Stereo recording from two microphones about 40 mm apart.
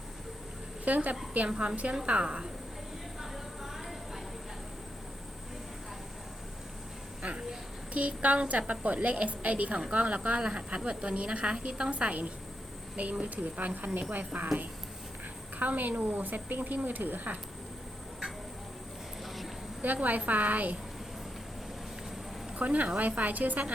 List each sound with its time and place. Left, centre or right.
0.9 s a woman's voice: right
1.5 s a woman's voice: right
7.2 s a sound: right
7.9 s a woman's voice: right
19.8 s a woman's voice: right
22.5 s a woman's voice: right